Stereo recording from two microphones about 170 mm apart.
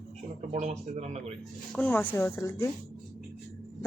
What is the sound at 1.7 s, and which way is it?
A woman's voice, 10° left (ahead or behind).